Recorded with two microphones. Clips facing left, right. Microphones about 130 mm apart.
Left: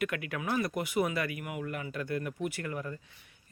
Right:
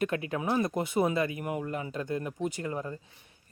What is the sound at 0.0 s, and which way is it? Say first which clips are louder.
Speech: right 4 dB; 30° right (ahead or behind).